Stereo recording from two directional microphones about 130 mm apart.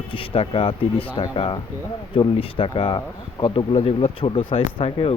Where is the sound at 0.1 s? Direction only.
45° left (ahead or behind).